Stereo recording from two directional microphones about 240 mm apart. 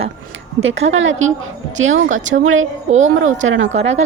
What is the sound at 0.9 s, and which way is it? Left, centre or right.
A woman's voice, right.